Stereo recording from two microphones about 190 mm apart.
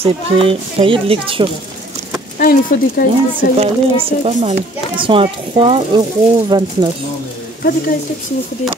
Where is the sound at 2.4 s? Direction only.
50° left (ahead or behind).